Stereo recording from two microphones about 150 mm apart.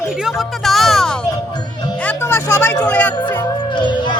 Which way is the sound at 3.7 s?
30° left (ahead or behind).